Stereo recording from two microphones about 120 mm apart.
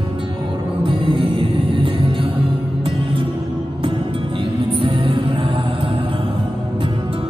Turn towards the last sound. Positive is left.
turn(degrees=-45)  # may be behind; listen again after turning